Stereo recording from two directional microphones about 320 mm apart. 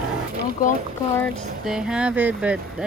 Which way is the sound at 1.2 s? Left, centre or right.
Centre.